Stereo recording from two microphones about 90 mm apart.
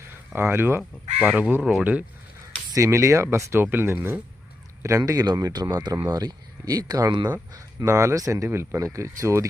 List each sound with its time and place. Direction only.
0.3 s speech: 25° right (ahead or behind)
0.8 s speech: 10° right (ahead or behind)
2.7 s speech: 35° right (ahead or behind)